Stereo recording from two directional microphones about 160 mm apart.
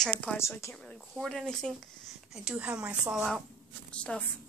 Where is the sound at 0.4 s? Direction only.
15° left (ahead or behind).